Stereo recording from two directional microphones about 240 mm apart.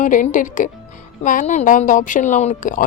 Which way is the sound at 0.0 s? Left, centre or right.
Left.